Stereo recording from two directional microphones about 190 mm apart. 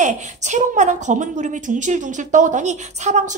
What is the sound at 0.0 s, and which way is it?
A woman's voice, 40° right (ahead or behind).